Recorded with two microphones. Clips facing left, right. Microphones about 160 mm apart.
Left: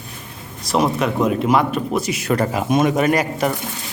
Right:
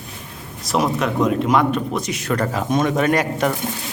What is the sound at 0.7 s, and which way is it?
A man's voice, centre (ahead or behind).